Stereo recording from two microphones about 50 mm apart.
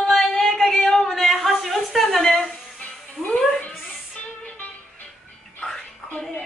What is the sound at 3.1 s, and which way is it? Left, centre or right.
Speech, left.